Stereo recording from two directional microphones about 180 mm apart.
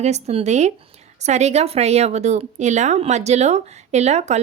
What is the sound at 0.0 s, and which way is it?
A woman's voice, 35° right (ahead or behind).